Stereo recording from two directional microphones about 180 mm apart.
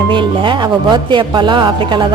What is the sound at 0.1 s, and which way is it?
A woman's voice, 25° right (ahead or behind).